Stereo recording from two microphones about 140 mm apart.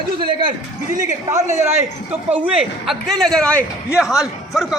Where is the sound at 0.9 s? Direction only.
55° right (ahead or behind).